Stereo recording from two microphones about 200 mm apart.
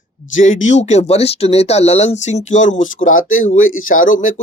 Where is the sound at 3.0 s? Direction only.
90° left.